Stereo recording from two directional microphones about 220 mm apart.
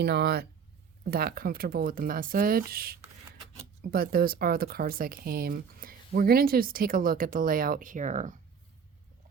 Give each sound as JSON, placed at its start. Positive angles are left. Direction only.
{"t": 0.0, "sound": "speech", "side_deg": -45}